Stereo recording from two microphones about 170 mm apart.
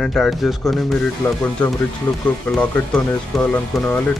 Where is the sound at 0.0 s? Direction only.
Centre (ahead or behind).